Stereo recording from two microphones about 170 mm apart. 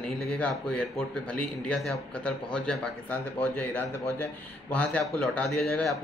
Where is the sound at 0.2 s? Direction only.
5° left (ahead or behind).